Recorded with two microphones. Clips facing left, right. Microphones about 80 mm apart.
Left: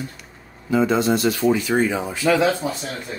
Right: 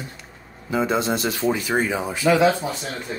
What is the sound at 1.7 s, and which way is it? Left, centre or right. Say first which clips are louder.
Speech: left 2 dB; centre.